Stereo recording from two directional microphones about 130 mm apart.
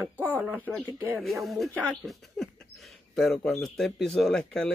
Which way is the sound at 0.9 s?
20° right (ahead or behind).